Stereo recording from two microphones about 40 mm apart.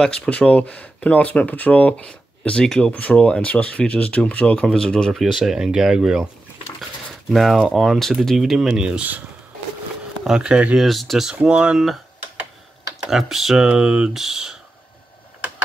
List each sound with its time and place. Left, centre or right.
0.0 s speech: left
2.0 s speech: left
2.8 s speech: left; by 5.1 s centre
5.1 s speech: centre
7.2 s speech: centre
8.5 s speech: centre
10.2 s speech: centre
10.9 s speech: centre
11.1 s speech: centre
13.1 s speech: centre
13.7 s speech: right
14.1 s speech: centre